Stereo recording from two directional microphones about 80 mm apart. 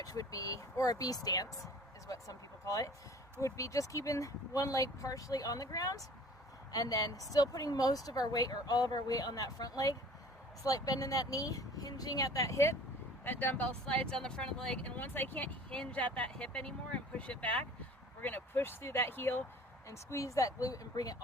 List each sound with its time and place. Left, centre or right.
0.0 s speech: left
13.2 s speech: left
15.7 s speech: centre
19.9 s speech: left